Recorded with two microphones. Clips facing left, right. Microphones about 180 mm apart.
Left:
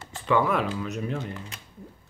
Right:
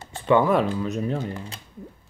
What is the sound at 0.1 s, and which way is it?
Speech, 30° right (ahead or behind).